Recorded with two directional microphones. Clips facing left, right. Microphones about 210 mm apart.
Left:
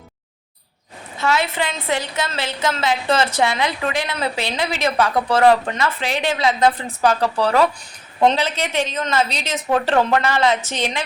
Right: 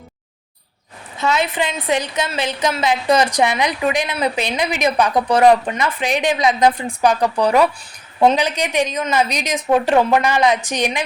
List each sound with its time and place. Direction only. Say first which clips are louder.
1.2 s a woman's voice: right 1 dB; 20° right (ahead or behind)